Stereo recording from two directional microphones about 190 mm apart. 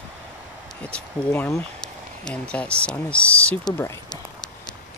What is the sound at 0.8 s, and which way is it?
Speech, 5° left (ahead or behind).